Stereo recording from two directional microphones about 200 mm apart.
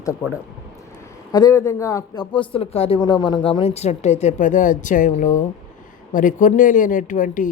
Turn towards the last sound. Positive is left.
turn(degrees=40)  # may be behind; listen again after turning